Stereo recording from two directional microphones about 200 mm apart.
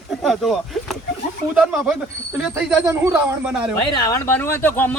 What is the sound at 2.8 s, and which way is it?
Speech, 15° right (ahead or behind).